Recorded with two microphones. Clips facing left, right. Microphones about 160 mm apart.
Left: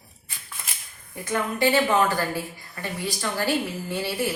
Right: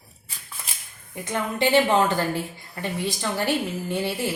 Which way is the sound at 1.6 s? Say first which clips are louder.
Right 2 dB; 25° right (ahead or behind).